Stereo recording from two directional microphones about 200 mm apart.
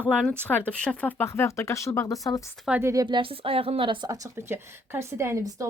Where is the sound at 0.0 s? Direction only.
5° left (ahead or behind).